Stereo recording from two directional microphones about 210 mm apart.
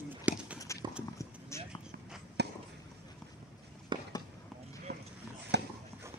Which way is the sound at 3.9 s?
20° right (ahead or behind).